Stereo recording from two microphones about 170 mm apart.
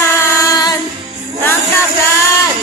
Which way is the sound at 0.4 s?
20° left (ahead or behind).